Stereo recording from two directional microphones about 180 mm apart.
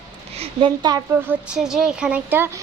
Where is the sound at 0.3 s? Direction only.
30° right (ahead or behind).